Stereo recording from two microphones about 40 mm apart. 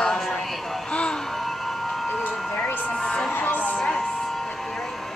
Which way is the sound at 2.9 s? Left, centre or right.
Centre.